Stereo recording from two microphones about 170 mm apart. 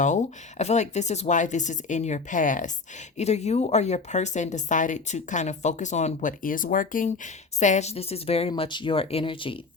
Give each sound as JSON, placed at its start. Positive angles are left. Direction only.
{"t": 0.0, "sound": "speech", "side_deg": 45}